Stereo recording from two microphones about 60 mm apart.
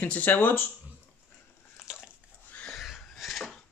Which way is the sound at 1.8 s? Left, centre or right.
Centre.